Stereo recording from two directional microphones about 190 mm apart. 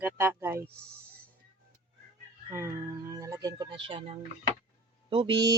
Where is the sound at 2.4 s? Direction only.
15° right (ahead or behind).